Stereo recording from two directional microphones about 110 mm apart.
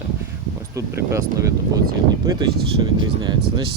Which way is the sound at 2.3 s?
45° right (ahead or behind).